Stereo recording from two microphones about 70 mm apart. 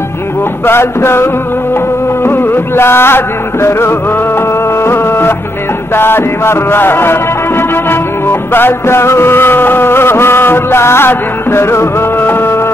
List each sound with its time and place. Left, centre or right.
0.7 s music: left